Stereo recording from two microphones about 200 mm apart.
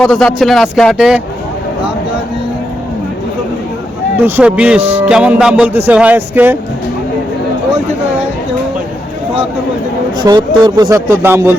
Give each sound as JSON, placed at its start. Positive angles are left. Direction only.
{"t": 0.0, "sound": "speech", "side_deg": 0}
{"t": 4.3, "sound": "speech", "side_deg": -5}
{"t": 10.2, "sound": "speech", "side_deg": -20}